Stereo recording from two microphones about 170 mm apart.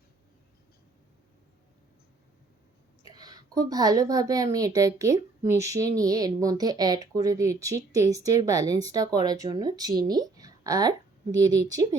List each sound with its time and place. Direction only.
3.0 s a woman's voice: 20° right (ahead or behind)